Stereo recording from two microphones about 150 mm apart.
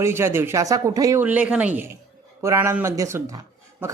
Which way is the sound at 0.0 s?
15° right (ahead or behind).